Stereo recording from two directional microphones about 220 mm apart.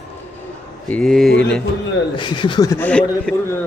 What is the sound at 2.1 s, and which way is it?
A man's voice, 20° left (ahead or behind).